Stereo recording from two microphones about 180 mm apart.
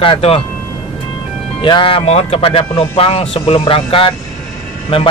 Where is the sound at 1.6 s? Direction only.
30° left (ahead or behind).